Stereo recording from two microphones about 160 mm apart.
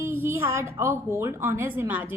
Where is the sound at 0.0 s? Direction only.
15° right (ahead or behind).